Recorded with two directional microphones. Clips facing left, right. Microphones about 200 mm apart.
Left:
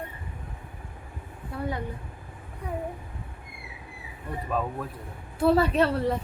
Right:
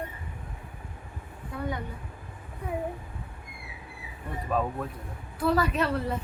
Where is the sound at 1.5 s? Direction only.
35° left (ahead or behind).